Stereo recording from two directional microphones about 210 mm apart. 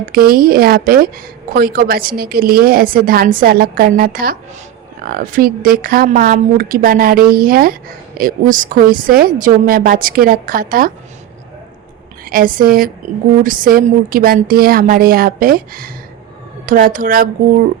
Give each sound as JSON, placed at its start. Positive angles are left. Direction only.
{"t": 0.0, "sound": "a woman's voice", "side_deg": -45}
{"t": 12.2, "sound": "a woman's voice", "side_deg": -40}